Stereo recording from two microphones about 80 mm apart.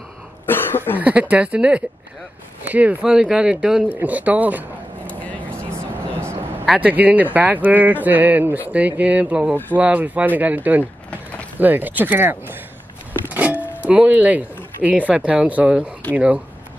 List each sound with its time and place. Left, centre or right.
0.5 s cough: left
0.9 s speech: centre
4.0 s speech: centre
6.8 s speech: centre